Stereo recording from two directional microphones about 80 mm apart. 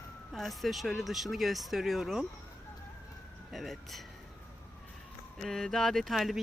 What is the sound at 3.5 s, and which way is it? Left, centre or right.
Speech, centre.